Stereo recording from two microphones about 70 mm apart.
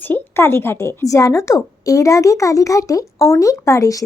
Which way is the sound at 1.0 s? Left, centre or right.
Left.